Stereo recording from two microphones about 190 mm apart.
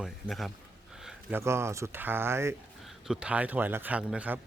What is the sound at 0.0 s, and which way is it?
Speech, centre (ahead or behind).